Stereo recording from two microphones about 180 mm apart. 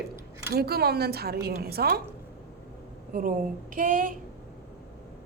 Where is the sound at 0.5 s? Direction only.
60° right (ahead or behind).